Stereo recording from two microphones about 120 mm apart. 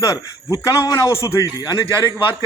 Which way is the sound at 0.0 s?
30° left (ahead or behind).